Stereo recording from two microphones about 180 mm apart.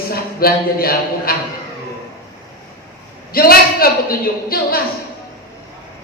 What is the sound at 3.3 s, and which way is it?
Speech, 55° left (ahead or behind).